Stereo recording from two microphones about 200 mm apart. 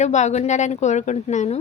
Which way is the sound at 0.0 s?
35° left (ahead or behind).